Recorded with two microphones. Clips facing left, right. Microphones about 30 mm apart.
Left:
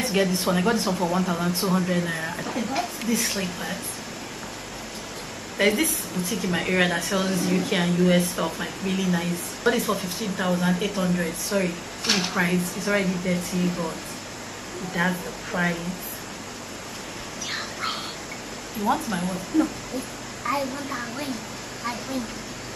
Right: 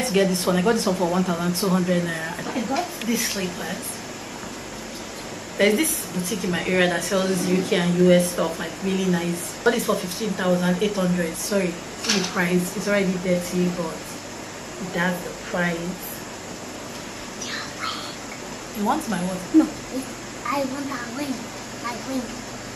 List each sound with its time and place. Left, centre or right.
0.0 s a woman's voice: centre
5.6 s a woman's voice: centre
17.5 s a sound: centre
18.9 s a woman's voice: centre